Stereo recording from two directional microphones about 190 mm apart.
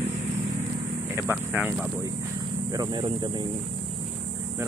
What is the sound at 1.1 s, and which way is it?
Speech, 10° right (ahead or behind).